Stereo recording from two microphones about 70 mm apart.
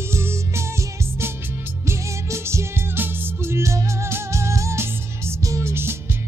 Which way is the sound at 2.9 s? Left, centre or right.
Right.